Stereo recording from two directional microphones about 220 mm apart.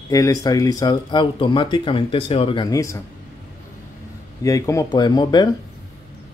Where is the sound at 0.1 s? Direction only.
15° left (ahead or behind).